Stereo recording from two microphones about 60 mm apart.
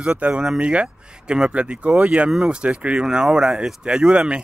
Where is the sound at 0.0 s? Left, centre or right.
Centre.